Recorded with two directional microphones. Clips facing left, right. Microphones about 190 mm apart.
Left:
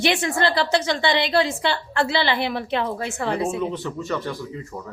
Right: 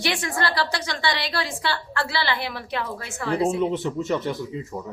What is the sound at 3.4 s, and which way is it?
Speech, 25° right (ahead or behind).